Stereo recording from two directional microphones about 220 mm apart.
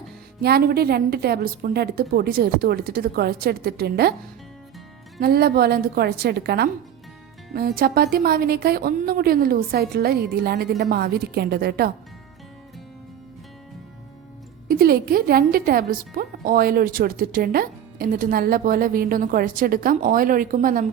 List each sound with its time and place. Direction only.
0.4 s speech: 45° right (ahead or behind)
5.2 s speech: 45° right (ahead or behind)
14.7 s a woman's voice: 45° right (ahead or behind)